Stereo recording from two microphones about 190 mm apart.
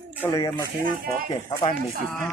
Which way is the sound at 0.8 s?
50° right (ahead or behind).